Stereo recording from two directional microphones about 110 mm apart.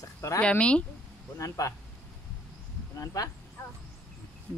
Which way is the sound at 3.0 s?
30° left (ahead or behind).